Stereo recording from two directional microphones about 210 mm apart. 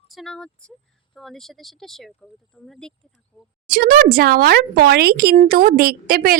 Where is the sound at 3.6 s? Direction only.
45° right (ahead or behind).